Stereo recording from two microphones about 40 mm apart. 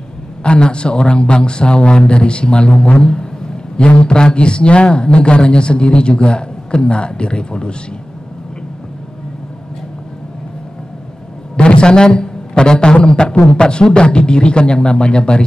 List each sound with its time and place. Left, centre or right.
0.4 s a man's voice: left
11.5 s a man's voice: left